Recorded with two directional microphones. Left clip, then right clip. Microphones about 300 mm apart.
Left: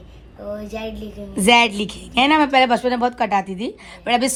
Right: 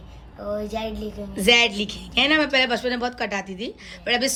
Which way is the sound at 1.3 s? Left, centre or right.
Centre.